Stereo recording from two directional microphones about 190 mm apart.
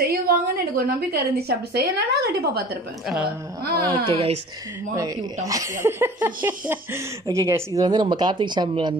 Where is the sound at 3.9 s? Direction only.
30° right (ahead or behind).